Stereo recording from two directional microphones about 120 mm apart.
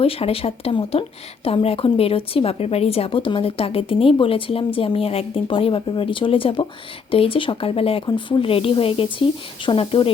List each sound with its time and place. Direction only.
0.0 s a woman's voice: 55° left (ahead or behind)